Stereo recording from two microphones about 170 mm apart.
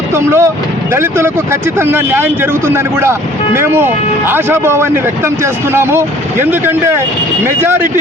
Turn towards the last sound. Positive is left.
turn(degrees=-15)  # may be behind; listen again after turning